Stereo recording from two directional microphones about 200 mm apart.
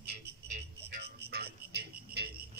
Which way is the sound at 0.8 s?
55° right (ahead or behind).